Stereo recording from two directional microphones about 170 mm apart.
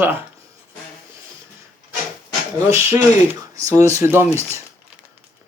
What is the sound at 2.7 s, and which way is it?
Speech, 15° right (ahead or behind).